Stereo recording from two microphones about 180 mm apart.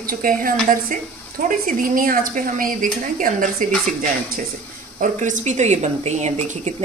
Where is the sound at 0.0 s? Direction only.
50° right (ahead or behind).